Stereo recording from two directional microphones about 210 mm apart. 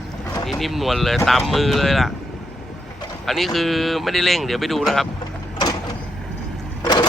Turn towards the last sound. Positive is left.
turn(degrees=20)  # may be behind; listen again after turning